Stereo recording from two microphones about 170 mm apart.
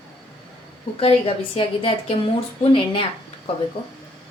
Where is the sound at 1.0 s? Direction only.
35° left (ahead or behind).